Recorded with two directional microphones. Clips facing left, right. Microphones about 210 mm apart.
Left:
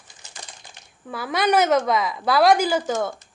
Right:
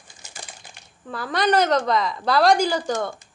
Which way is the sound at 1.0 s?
5° left (ahead or behind).